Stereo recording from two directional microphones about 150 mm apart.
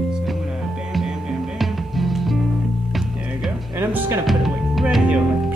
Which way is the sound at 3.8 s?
20° right (ahead or behind).